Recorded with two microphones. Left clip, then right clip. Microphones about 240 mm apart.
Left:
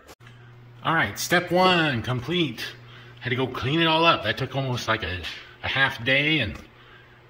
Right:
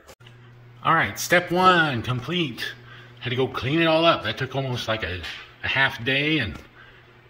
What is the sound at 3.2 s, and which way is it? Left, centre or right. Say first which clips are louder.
Speech: right 1 dB; centre.